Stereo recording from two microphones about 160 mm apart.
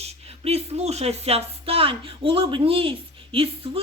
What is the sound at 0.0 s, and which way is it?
Speech, 40° right (ahead or behind).